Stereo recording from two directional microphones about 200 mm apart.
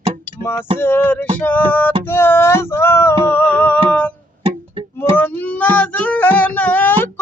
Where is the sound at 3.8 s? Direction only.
5° left (ahead or behind).